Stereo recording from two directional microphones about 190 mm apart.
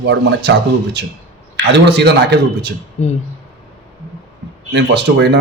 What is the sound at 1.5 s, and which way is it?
A man's voice, 65° right (ahead or behind).